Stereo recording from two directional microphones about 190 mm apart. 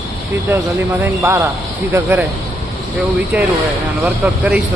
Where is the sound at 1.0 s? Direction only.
15° right (ahead or behind).